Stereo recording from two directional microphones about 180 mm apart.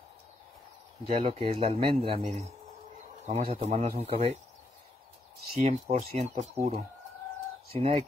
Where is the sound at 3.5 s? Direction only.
40° right (ahead or behind).